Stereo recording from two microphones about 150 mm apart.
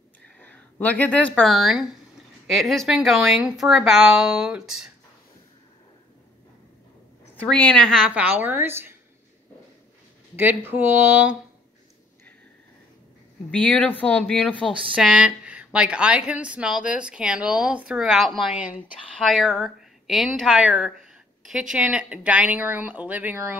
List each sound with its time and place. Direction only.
0.4 s speech: 10° left (ahead or behind)
7.8 s a woman's voice: 5° right (ahead or behind)
10.3 s a woman's voice: 15° right (ahead or behind)
13.5 s a woman's voice: 10° left (ahead or behind); by 23.6 s 15° right (ahead or behind)